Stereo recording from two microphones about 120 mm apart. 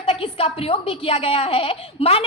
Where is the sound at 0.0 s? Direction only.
50° left (ahead or behind).